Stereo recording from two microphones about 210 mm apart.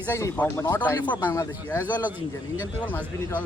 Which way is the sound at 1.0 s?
20° left (ahead or behind).